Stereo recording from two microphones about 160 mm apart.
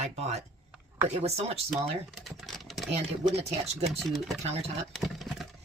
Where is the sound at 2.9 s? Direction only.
40° right (ahead or behind).